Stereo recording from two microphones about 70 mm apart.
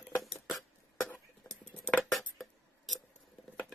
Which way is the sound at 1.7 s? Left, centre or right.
Centre.